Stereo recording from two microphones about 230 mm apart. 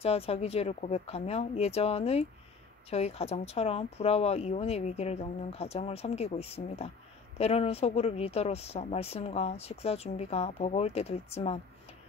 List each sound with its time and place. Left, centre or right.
0.0 s speech: left